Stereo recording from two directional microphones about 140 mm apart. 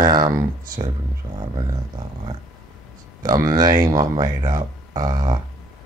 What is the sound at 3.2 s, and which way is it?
Speech, 25° right (ahead or behind).